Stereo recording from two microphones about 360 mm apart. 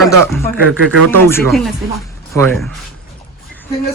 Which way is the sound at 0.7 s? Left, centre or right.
Right.